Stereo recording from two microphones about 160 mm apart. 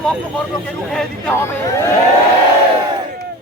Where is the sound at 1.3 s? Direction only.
15° left (ahead or behind).